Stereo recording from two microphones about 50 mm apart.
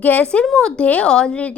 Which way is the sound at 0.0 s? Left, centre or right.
Left.